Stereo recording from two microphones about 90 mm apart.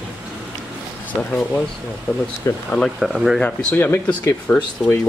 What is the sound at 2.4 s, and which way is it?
Speech, 35° left (ahead or behind).